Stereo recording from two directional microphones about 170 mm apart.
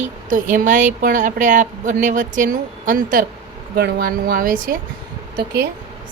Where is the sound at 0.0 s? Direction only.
45° right (ahead or behind).